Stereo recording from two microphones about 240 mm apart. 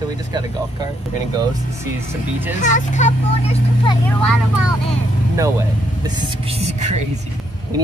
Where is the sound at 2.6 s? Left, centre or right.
Left.